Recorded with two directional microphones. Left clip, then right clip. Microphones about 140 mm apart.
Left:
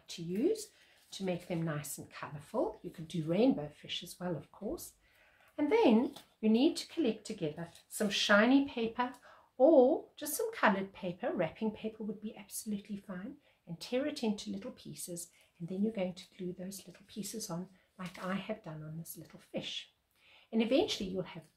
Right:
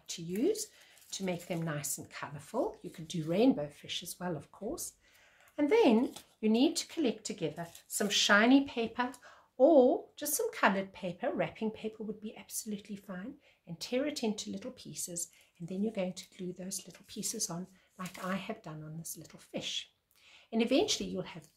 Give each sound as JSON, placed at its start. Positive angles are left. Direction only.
{"t": 0.0, "sound": "speech", "side_deg": -40}